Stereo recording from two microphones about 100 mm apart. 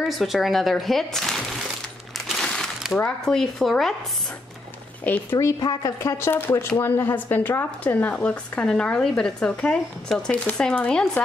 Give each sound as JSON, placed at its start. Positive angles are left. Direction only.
{"t": 0.0, "sound": "speech", "side_deg": 0}
{"t": 2.1, "sound": "a sound", "side_deg": 0}
{"t": 3.3, "sound": "speech", "side_deg": 5}
{"t": 5.0, "sound": "a woman's voice", "side_deg": 15}
{"t": 5.4, "sound": "a woman's voice", "side_deg": 40}
{"t": 6.1, "sound": "a woman's voice", "side_deg": 25}